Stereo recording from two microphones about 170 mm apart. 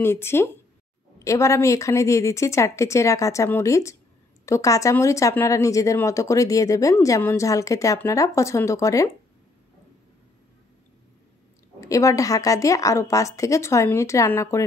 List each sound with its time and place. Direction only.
0.0 s a woman's voice: 15° left (ahead or behind)
11.8 s speech: 20° left (ahead or behind)